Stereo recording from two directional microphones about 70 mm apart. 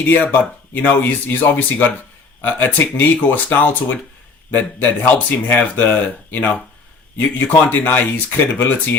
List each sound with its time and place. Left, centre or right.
0.0 s speech: left